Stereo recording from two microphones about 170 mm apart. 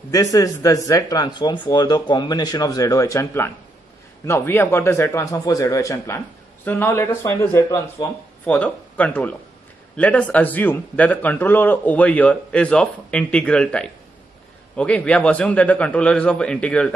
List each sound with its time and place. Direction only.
0.1 s speech: 20° left (ahead or behind)